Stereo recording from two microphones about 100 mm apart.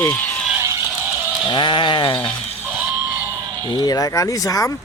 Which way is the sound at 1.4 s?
50° left (ahead or behind).